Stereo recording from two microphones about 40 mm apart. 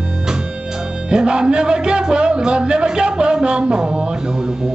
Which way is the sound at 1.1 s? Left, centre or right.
Right.